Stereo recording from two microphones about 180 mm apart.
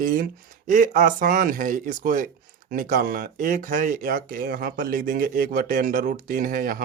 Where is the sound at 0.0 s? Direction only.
50° right (ahead or behind).